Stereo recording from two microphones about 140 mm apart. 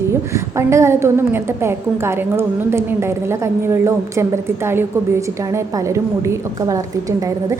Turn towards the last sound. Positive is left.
turn(degrees=-20)  # may be behind; listen again after turning